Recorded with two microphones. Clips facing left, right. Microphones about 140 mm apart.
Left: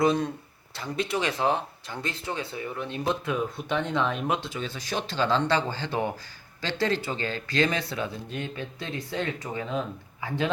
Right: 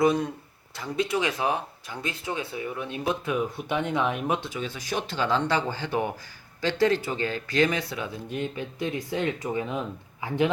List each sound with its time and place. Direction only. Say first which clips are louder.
0.0 s speech: right 1 dB; 10° right (ahead or behind)